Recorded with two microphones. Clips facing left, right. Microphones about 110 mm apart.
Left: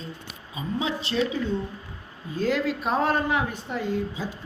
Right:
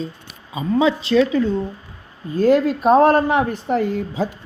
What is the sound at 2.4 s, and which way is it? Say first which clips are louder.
Speech: right 10 dB; 50° right (ahead or behind).